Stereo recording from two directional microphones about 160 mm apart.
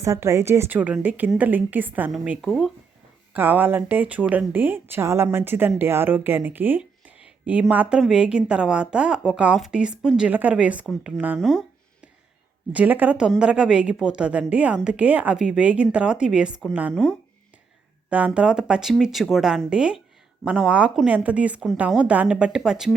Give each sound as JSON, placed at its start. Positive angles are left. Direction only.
{"t": 0.0, "sound": "a woman's voice", "side_deg": -20}
{"t": 3.3, "sound": "a woman's voice", "side_deg": -10}
{"t": 12.7, "sound": "a woman's voice", "side_deg": -10}
{"t": 18.3, "sound": "a woman's voice", "side_deg": -5}